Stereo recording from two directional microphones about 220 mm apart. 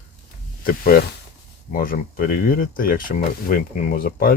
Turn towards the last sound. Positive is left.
turn(degrees=40)  # may be behind; listen again after turning